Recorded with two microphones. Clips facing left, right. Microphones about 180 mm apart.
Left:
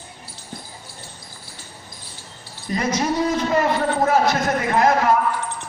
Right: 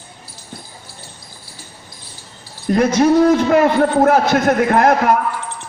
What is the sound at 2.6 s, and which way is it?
A man's voice, 55° right (ahead or behind).